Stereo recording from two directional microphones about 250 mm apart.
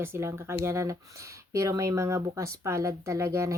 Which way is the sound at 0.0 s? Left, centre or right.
Centre.